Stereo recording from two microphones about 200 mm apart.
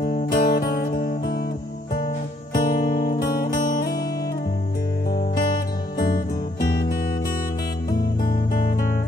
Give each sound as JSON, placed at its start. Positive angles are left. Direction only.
{"t": 0.0, "sound": "music", "side_deg": 50}
{"t": 5.1, "sound": "music", "side_deg": 50}